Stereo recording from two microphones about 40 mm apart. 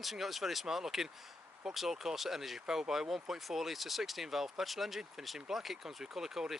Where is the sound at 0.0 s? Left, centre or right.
Centre.